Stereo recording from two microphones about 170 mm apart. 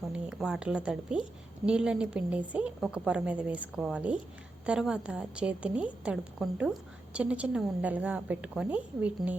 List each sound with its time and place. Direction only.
0.1 s a woman's voice: 5° right (ahead or behind)